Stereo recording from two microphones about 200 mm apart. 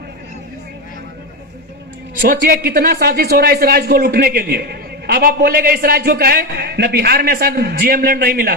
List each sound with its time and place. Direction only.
2.2 s speech: 45° right (ahead or behind)